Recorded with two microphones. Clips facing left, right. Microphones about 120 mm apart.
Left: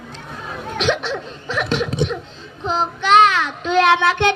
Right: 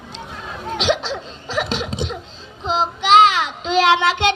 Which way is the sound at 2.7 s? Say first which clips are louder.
Right 1 dB; 90° right.